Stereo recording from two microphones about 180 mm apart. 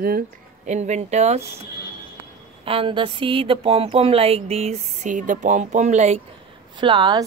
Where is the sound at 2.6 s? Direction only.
30° right (ahead or behind).